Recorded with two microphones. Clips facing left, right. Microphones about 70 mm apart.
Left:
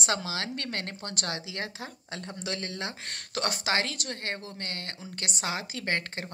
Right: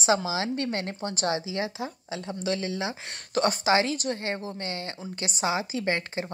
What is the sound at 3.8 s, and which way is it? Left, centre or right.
Speech, left.